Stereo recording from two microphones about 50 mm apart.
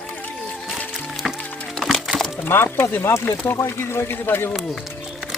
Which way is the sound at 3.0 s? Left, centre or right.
Left.